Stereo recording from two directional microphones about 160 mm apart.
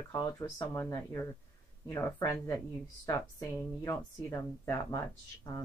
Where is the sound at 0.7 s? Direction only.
15° left (ahead or behind).